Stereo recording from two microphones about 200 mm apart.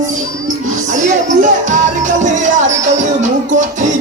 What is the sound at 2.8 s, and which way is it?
Music, 40° right (ahead or behind).